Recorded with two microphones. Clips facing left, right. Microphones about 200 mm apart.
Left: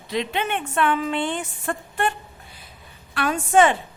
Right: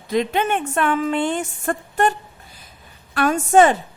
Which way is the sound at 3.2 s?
45° right (ahead or behind).